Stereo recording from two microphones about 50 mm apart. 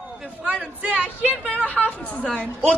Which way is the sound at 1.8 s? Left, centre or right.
Left.